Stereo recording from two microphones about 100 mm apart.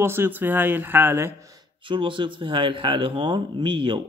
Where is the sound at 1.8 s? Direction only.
55° right (ahead or behind).